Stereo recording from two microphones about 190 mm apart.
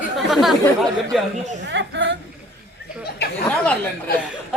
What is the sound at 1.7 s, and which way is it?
Speech, 75° right (ahead or behind).